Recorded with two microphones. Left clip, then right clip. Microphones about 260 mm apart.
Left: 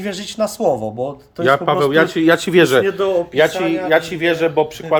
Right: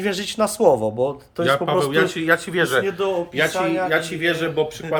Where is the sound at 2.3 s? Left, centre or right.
Left.